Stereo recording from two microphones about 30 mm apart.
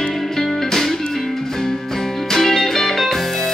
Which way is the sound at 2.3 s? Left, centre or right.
Centre.